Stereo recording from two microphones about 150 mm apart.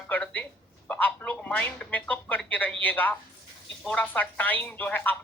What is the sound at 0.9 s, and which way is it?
Speech, 10° left (ahead or behind).